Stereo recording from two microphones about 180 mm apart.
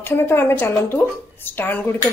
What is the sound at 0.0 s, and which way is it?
Speech, 10° left (ahead or behind).